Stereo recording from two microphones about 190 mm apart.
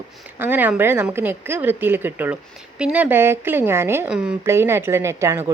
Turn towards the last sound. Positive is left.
turn(degrees=-15)  # may be behind; listen again after turning